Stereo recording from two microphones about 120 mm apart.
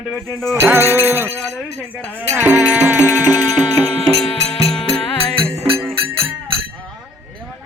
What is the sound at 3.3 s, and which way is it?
Music, 30° left (ahead or behind).